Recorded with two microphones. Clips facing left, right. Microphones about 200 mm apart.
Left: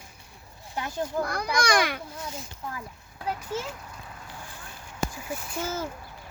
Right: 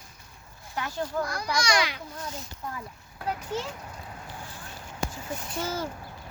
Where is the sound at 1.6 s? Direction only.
55° left (ahead or behind).